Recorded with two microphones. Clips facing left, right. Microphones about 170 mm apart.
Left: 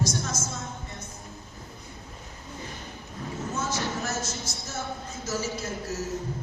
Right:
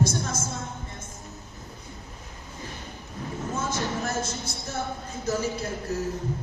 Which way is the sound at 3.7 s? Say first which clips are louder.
Right 2 dB; 55° right (ahead or behind).